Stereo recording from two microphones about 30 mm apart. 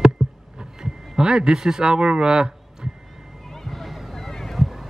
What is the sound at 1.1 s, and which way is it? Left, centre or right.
Speech, right.